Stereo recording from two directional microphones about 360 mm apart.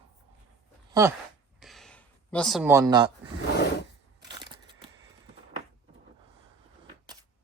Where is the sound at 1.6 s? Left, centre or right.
Centre.